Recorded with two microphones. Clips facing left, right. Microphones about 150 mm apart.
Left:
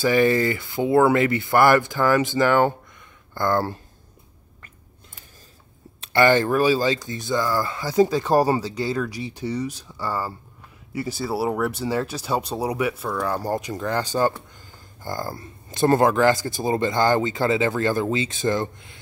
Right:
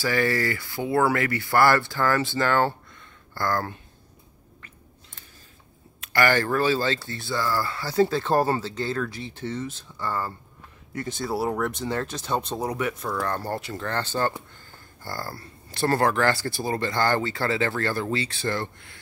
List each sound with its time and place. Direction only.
0.0 s speech: 20° left (ahead or behind)
5.9 s speech: 20° left (ahead or behind)